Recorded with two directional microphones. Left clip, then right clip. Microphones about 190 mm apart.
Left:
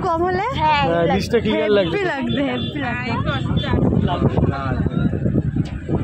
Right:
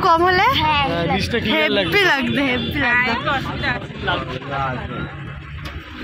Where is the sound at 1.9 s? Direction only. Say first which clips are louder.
Right 5 dB; 5° left (ahead or behind).